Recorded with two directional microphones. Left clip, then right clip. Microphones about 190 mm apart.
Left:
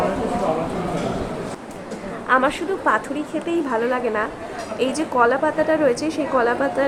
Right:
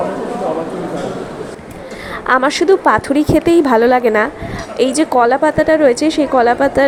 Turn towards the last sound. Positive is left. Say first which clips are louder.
# right 8 dB
turn(degrees=-30)  # may be behind; listen again after turning